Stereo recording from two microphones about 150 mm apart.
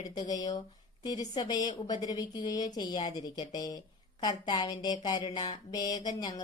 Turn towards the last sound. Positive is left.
turn(degrees=25)  # may be behind; listen again after turning